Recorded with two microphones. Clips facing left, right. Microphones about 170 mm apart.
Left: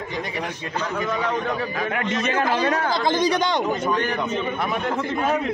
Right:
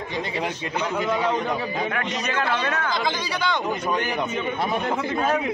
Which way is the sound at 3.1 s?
45° left (ahead or behind).